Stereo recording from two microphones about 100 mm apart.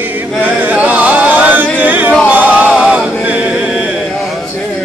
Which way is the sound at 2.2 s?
15° right (ahead or behind).